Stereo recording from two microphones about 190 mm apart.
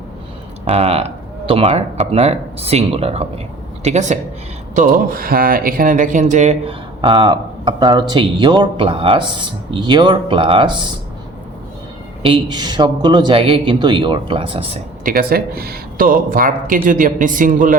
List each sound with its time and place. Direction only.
0.7 s speech: 30° right (ahead or behind)
12.2 s speech: 25° right (ahead or behind)
15.0 s speech: 50° right (ahead or behind)